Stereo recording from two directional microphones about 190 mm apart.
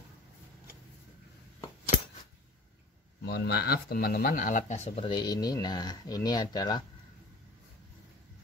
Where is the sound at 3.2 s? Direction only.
60° left (ahead or behind); by 6.9 s 20° left (ahead or behind).